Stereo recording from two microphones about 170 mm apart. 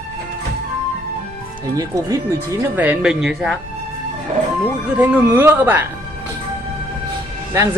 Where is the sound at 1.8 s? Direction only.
20° right (ahead or behind).